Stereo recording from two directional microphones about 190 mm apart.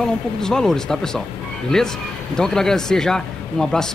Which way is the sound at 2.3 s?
5° left (ahead or behind).